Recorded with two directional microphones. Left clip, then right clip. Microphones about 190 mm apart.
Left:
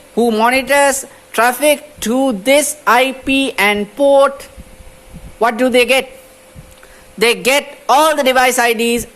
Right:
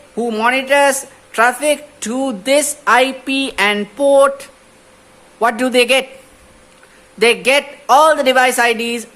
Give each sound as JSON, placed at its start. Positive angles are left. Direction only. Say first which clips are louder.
{"t": 0.2, "sound": "a man's voice", "louder": "left 3 dB", "side_deg": 30}
{"t": 7.2, "sound": "a man's voice", "louder": "even", "side_deg": 25}